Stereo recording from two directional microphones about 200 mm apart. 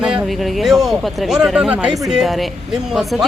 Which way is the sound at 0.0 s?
5° right (ahead or behind).